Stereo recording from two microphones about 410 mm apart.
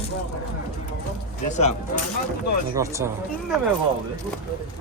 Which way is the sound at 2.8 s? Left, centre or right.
Centre.